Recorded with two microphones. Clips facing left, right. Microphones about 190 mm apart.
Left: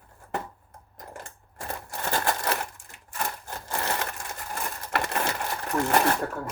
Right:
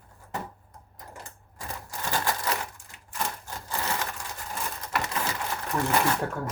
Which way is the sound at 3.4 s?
60° left (ahead or behind).